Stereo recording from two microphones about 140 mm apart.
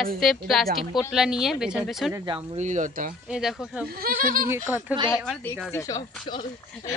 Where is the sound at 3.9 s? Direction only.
90° right.